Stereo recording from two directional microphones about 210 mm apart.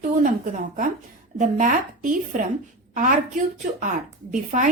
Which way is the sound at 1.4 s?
35° right (ahead or behind).